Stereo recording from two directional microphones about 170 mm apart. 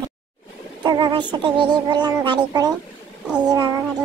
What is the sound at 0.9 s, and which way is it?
Speech, 25° right (ahead or behind).